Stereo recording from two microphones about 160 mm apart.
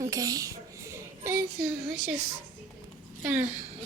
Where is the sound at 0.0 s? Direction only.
20° right (ahead or behind).